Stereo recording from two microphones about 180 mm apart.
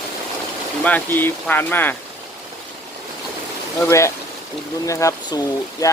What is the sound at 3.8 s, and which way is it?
Speech, 15° left (ahead or behind).